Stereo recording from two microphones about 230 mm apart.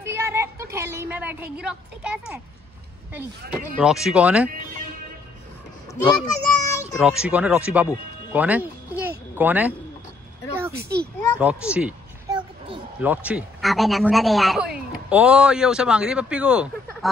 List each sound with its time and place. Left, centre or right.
0.0 s a woman's voice: centre
3.8 s speech: centre
6.1 s a child's voice: centre
7.0 s a woman's voice: centre
10.8 s a child's voice: right
11.3 s speech: centre
12.3 s a sound: right
13.0 s speech: centre